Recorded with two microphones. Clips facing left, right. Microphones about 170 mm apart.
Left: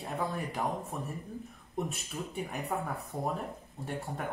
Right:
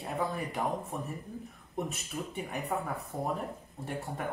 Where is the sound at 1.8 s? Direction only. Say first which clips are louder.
Right 1 dB; centre (ahead or behind).